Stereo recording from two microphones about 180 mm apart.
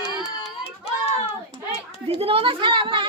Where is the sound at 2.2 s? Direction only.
30° right (ahead or behind).